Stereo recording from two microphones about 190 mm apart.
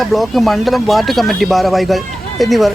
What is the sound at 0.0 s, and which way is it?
Speech, centre (ahead or behind).